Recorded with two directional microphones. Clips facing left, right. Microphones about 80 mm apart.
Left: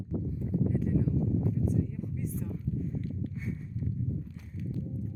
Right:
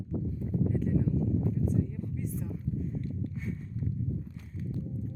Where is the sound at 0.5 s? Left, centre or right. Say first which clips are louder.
Even; centre.